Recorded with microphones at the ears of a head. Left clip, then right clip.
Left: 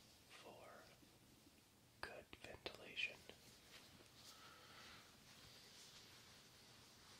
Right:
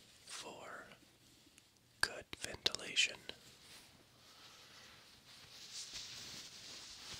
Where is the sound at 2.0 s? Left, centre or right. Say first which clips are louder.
Right 15 dB; right.